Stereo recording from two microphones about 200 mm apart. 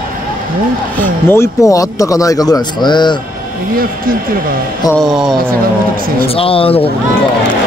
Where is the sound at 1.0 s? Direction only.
10° left (ahead or behind).